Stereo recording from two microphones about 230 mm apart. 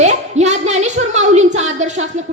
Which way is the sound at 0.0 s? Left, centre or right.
Right.